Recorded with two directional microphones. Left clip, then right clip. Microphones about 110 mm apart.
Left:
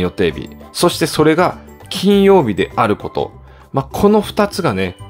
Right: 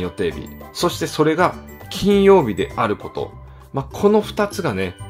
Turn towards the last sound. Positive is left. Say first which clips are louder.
# left 5 dB
turn(degrees=20)  # may be behind; listen again after turning